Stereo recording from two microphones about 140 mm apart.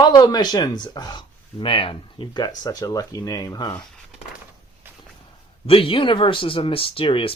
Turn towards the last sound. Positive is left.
turn(degrees=40)  # may be behind; listen again after turning